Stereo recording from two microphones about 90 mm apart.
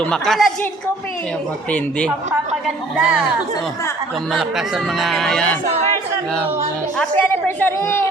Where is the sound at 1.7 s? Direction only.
15° left (ahead or behind).